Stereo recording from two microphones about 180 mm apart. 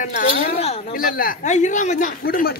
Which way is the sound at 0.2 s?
55° left (ahead or behind).